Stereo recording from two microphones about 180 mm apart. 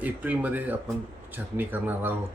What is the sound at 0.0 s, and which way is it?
Speech, 10° right (ahead or behind).